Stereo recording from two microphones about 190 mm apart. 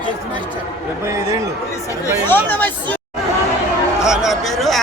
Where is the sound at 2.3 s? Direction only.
10° left (ahead or behind).